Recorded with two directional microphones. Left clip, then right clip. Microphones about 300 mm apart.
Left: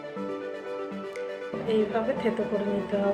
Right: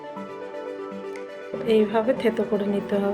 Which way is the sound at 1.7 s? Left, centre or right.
Right.